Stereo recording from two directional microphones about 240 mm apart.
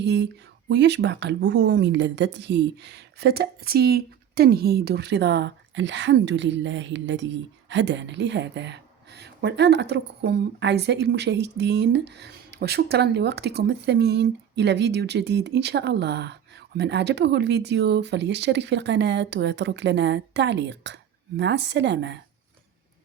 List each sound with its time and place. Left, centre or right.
0.0 s speech: right